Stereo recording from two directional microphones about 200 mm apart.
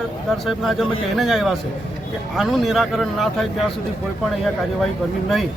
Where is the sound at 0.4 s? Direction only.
Centre (ahead or behind).